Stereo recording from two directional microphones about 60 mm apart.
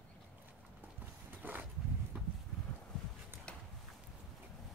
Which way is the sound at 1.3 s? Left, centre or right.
Right.